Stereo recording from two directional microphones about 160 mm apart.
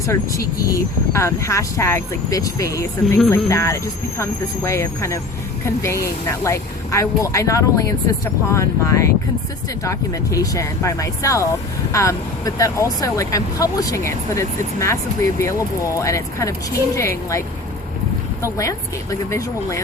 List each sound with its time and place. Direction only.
0.0 s speech: 20° left (ahead or behind)